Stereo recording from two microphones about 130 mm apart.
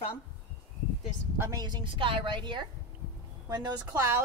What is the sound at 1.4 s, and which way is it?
A woman's voice, 30° right (ahead or behind).